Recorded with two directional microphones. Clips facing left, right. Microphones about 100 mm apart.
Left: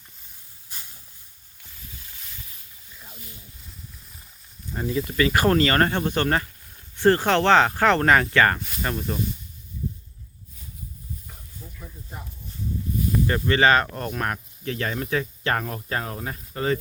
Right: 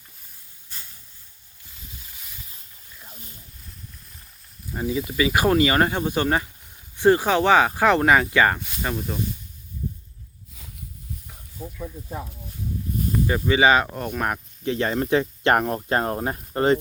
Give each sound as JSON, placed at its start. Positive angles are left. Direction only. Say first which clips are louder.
{"t": 2.0, "sound": "a sound", "louder": "even", "side_deg": -10}
{"t": 2.9, "sound": "wild animals", "louder": "even", "side_deg": 0}
{"t": 4.7, "sound": "speech", "louder": "right 1 dB", "side_deg": -5}
{"t": 11.6, "sound": "snake", "louder": "right 10 dB", "side_deg": -90}
{"t": 13.2, "sound": "speech", "louder": "right 2 dB", "side_deg": -10}